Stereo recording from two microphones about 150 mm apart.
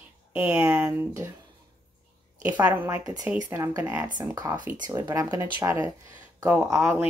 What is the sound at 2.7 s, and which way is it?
Speech, 15° right (ahead or behind).